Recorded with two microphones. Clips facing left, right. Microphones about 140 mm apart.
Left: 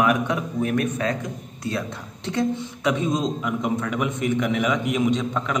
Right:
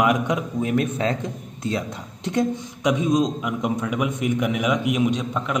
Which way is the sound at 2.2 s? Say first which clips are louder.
Right 1 dB; 15° right (ahead or behind).